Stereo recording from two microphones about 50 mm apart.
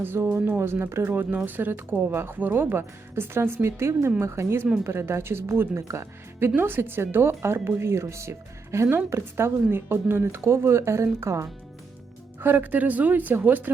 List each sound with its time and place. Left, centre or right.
0.0 s speech: right
1.1 s a woman's voice: right
3.7 s a woman's voice: right
6.6 s speech: right
10.4 s a woman's voice: right
12.4 s a woman's voice: right